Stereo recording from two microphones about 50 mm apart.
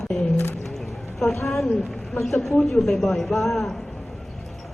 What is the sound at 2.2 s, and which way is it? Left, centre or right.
A woman's voice, centre.